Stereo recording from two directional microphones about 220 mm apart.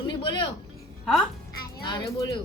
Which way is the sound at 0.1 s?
20° left (ahead or behind).